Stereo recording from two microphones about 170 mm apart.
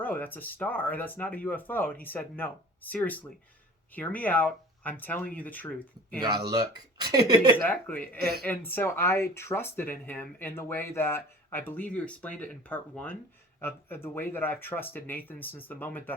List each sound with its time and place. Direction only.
0.0 s speech: 10° left (ahead or behind)
6.2 s speech: 25° right (ahead or behind)
7.7 s speech: 10° left (ahead or behind)